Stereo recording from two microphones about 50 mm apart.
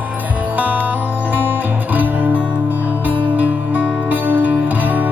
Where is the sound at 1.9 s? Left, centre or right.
Right.